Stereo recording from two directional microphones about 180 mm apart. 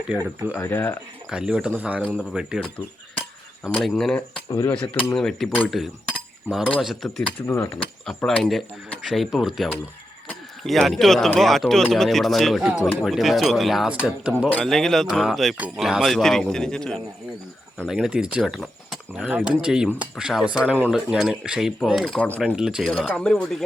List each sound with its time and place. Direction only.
0.5 s speech: 15° left (ahead or behind)
1.3 s speech: 5° right (ahead or behind)
3.8 s speech: centre (ahead or behind)
4.4 s speech: 20° left (ahead or behind)
4.7 s speech: 10° left (ahead or behind)
7.4 s speech: 15° left (ahead or behind)
8.0 s speech: 5° left (ahead or behind)